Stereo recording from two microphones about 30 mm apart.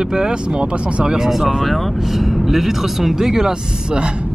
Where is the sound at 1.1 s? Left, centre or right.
Centre; by 4.1 s right.